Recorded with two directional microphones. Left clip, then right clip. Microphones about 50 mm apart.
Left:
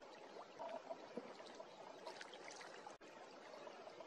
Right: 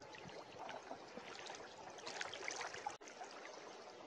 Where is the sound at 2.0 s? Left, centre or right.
Right.